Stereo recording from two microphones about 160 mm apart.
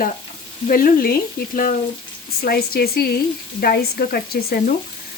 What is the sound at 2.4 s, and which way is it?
Speech, 70° left (ahead or behind).